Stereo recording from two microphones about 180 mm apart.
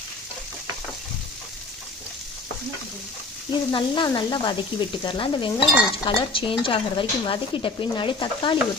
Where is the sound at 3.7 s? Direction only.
25° left (ahead or behind).